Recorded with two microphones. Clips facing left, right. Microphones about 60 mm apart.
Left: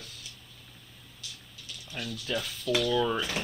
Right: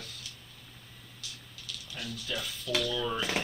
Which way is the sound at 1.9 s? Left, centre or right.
Left.